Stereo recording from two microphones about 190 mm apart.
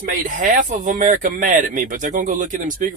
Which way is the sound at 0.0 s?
45° right (ahead or behind).